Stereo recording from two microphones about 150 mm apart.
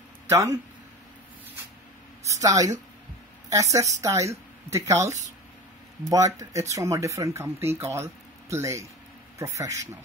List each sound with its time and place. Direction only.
0.3 s speech: 20° right (ahead or behind)
2.2 s a woman's voice: 20° right (ahead or behind)